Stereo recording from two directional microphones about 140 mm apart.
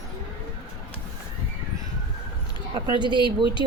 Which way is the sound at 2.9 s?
35° right (ahead or behind).